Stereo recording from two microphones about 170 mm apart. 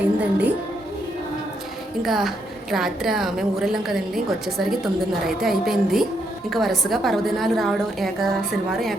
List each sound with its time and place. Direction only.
0.2 s a woman's voice: 10° right (ahead or behind)
2.0 s a woman's voice: centre (ahead or behind)